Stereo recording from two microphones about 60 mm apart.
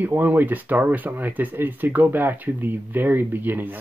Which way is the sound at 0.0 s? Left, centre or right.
Right.